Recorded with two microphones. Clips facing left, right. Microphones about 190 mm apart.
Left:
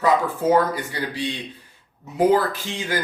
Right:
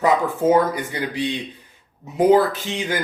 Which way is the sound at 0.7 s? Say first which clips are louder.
Right 2 dB; 20° right (ahead or behind).